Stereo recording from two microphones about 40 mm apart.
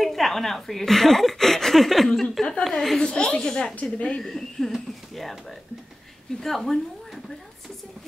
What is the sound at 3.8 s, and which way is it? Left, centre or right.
Speech, left.